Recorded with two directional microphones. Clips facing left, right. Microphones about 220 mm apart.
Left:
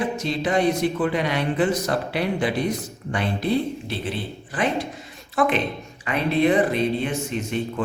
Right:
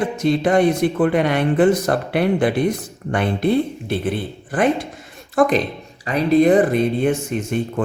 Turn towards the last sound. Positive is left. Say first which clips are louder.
# right 4 dB
turn(degrees=-50)  # may be behind; listen again after turning